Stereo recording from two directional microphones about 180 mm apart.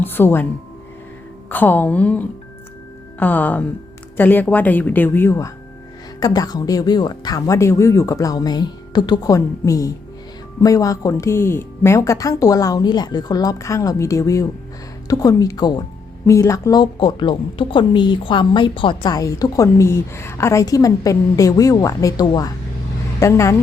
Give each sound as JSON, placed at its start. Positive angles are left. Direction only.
{"t": 0.0, "sound": "music", "side_deg": 10}
{"t": 1.5, "sound": "a woman's voice", "side_deg": 10}